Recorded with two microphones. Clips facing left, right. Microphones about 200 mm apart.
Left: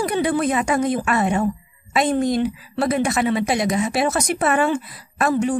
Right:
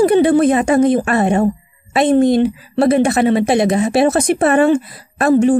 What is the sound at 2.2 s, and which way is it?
A woman's voice, 25° right (ahead or behind).